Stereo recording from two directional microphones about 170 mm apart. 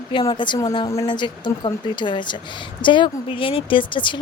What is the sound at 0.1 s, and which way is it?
A woman's voice, 25° left (ahead or behind).